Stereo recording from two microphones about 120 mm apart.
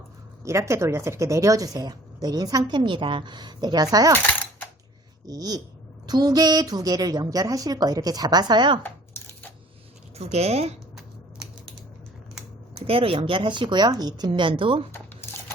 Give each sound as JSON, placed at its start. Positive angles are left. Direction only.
{"t": 0.4, "sound": "speech", "side_deg": -25}
{"t": 5.2, "sound": "speech", "side_deg": -30}
{"t": 8.8, "sound": "a sound", "side_deg": 15}
{"t": 10.2, "sound": "speech", "side_deg": -60}
{"t": 12.9, "sound": "a woman's voice", "side_deg": -50}